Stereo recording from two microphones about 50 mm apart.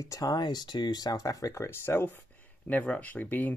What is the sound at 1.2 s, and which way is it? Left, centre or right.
Speech, left.